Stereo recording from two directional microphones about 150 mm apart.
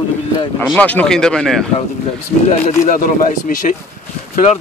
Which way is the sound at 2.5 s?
55° left (ahead or behind).